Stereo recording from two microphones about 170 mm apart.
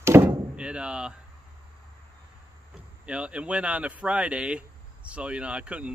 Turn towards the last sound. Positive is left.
turn(degrees=-5)  # may be behind; listen again after turning